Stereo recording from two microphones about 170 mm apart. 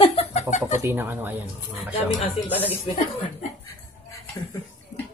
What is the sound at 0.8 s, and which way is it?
Speech, 10° right (ahead or behind).